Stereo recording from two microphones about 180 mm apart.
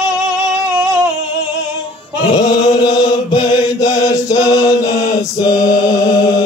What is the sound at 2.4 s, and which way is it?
Chant, 20° left (ahead or behind).